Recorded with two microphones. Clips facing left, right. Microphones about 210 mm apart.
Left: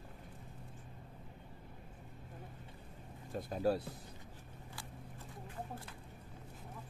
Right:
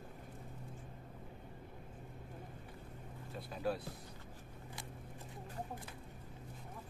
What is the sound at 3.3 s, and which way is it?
Speech, 45° left (ahead or behind).